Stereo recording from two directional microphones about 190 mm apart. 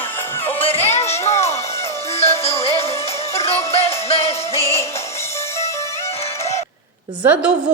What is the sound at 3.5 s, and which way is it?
Music, 15° left (ahead or behind).